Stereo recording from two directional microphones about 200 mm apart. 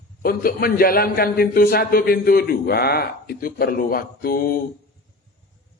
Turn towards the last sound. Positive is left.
turn(degrees=45)  # may be behind; listen again after turning